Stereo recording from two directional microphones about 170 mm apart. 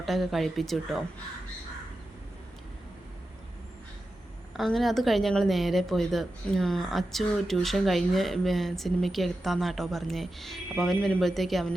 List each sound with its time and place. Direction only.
0.0 s a woman's voice: centre (ahead or behind)
4.5 s a woman's voice: centre (ahead or behind)